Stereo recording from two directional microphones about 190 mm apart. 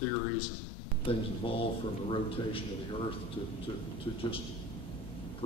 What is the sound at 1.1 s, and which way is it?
Speech, 30° left (ahead or behind).